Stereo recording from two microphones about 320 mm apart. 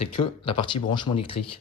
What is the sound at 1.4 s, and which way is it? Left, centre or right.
Speech, left.